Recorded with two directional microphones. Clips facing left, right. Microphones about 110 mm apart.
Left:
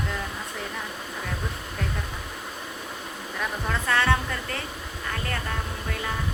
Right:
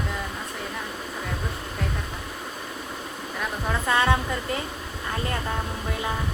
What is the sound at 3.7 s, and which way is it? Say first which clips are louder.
Speech: right 2 dB; 15° right (ahead or behind).